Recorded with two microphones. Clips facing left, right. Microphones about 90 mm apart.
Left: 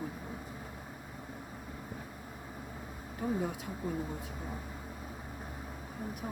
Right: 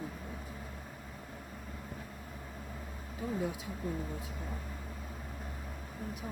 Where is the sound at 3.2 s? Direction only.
55° left (ahead or behind).